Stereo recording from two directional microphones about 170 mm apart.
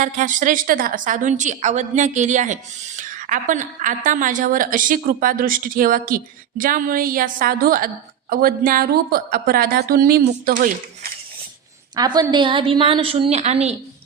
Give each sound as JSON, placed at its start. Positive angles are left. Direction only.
{"t": 0.0, "sound": "a woman's voice", "side_deg": -50}
{"t": 11.9, "sound": "a woman's voice", "side_deg": -25}